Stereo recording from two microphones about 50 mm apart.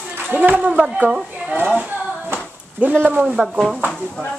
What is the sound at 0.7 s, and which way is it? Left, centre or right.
Speech, centre.